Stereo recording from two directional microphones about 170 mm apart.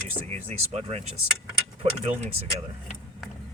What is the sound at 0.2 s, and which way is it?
Speech, 35° right (ahead or behind).